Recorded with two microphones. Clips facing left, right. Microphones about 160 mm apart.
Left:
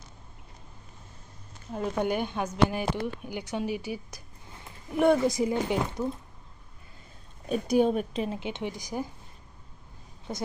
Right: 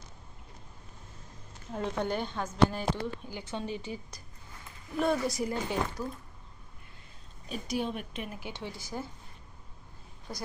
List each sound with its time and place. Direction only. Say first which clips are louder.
1.7 s a woman's voice: left 4 dB; 10° left (ahead or behind)
7.5 s a woman's voice: left 10 dB; 40° left (ahead or behind); by 9.1 s 15° left (ahead or behind)
10.3 s a woman's voice: left 6 dB; 20° left (ahead or behind)